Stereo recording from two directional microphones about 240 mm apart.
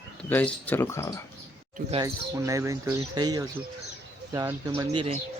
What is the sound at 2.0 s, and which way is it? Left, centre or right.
Speech, centre.